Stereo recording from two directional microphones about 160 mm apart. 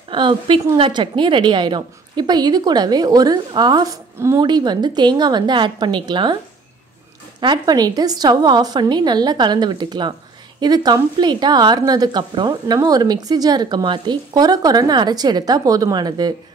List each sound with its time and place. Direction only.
0.1 s speech: 30° right (ahead or behind)
7.3 s speech: 25° right (ahead or behind)